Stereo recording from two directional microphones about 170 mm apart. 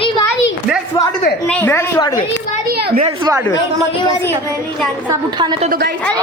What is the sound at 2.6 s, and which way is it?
Children playing, 65° right (ahead or behind).